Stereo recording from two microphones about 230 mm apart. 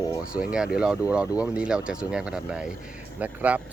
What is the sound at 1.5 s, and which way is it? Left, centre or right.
Speech, centre.